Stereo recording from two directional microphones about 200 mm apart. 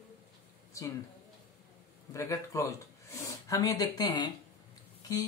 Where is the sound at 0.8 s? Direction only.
15° left (ahead or behind).